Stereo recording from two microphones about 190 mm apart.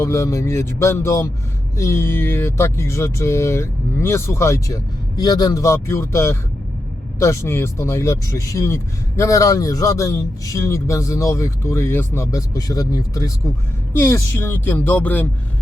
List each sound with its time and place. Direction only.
0.0 s speech: 15° left (ahead or behind)